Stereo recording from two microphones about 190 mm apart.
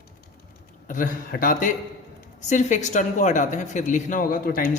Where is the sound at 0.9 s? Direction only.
45° left (ahead or behind).